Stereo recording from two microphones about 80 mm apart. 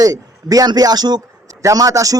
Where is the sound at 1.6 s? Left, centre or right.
Right.